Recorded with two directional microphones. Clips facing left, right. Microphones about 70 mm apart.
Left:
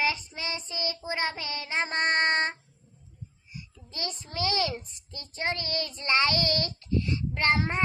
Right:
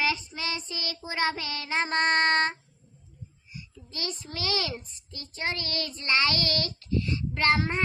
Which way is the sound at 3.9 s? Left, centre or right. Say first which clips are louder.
Even; left.